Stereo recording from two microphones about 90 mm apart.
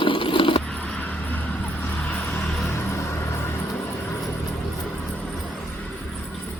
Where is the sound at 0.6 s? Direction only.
10° left (ahead or behind).